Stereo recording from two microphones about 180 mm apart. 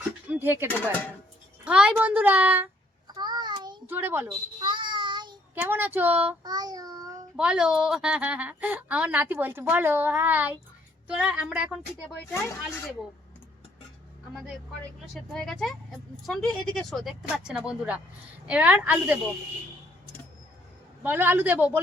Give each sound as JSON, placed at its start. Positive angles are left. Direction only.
{"t": 0.3, "sound": "a sound", "side_deg": -10}
{"t": 1.6, "sound": "a woman's voice", "side_deg": -5}
{"t": 3.2, "sound": "child singing", "side_deg": -25}
{"t": 3.8, "sound": "a woman's voice", "side_deg": -10}
{"t": 4.6, "sound": "child singing", "side_deg": -25}
{"t": 5.5, "sound": "a woman's voice", "side_deg": -10}
{"t": 6.4, "sound": "child singing", "side_deg": -20}
{"t": 7.3, "sound": "a woman's voice", "side_deg": -5}
{"t": 15.1, "sound": "a woman's voice", "side_deg": 0}
{"t": 21.0, "sound": "a woman's voice", "side_deg": -10}